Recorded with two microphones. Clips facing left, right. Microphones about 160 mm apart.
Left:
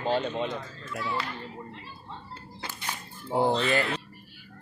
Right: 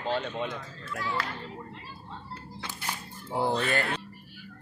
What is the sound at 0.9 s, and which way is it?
Speech, 5° left (ahead or behind).